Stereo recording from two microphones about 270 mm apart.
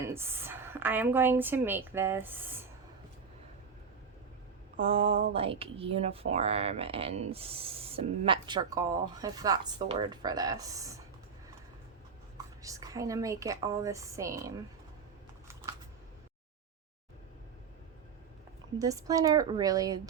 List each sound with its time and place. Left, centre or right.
0.1 s a woman's voice: centre
4.8 s speech: right
12.6 s a woman's voice: centre
18.8 s a woman's voice: centre